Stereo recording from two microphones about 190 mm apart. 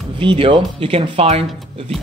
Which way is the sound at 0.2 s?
25° right (ahead or behind).